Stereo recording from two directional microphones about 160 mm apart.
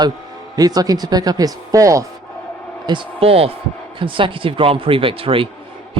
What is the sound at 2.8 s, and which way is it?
Speech, 35° right (ahead or behind).